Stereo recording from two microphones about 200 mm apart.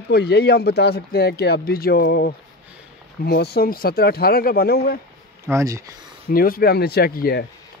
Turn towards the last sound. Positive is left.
turn(degrees=50)  # may be behind; listen again after turning